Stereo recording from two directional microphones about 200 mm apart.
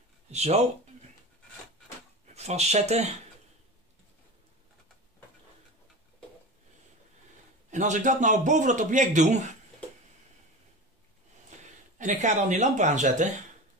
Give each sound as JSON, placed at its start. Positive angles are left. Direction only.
{"t": 0.3, "sound": "a man's voice", "side_deg": -30}
{"t": 2.3, "sound": "speech", "side_deg": -35}
{"t": 7.7, "sound": "a man's voice", "side_deg": -35}
{"t": 11.5, "sound": "a sound", "side_deg": -35}
{"t": 12.0, "sound": "a man's voice", "side_deg": -35}